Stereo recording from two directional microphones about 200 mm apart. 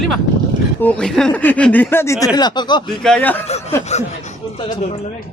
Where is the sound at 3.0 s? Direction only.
5° left (ahead or behind).